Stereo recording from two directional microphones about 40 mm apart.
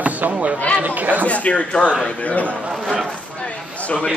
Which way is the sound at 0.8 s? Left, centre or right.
Right.